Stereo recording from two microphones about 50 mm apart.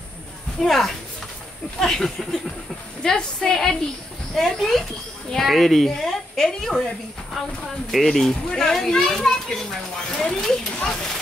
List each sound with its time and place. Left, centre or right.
0.6 s speech: centre